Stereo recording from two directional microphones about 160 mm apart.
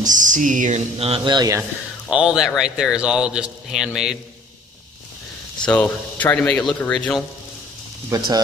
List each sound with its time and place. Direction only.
0.0 s speech: 55° right (ahead or behind); by 1.6 s 25° right (ahead or behind)
1.6 s speech: 5° right (ahead or behind)
5.7 s speech: 10° left (ahead or behind)